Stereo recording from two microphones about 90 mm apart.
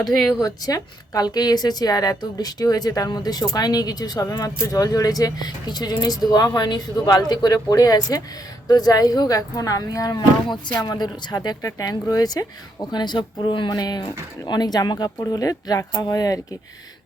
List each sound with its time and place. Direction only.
0.0 s speech: 5° left (ahead or behind)
0.3 s a woman's voice: 45° left (ahead or behind)
12.9 s speech: 55° left (ahead or behind)
13.7 s a woman's voice: 45° left (ahead or behind)